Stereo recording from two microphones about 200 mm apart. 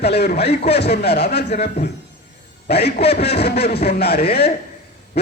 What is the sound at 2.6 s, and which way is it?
A man's voice, 55° left (ahead or behind).